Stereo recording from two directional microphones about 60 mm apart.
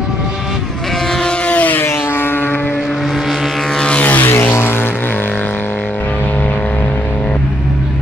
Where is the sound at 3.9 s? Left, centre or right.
Left.